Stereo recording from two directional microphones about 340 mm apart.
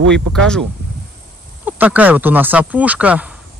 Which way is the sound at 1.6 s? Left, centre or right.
Centre.